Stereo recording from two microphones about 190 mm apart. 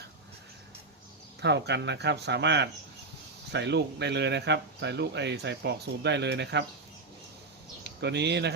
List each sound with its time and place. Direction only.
1.4 s speech: 65° right (ahead or behind)
7.9 s speech: 65° right (ahead or behind)